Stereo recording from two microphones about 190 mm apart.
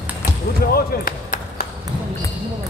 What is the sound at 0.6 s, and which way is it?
Basketball bounce, 55° left (ahead or behind).